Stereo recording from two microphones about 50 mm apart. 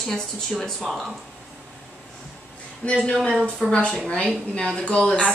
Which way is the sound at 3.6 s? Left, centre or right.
Centre.